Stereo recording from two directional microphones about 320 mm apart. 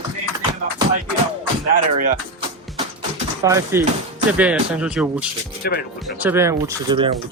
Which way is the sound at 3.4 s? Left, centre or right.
Centre.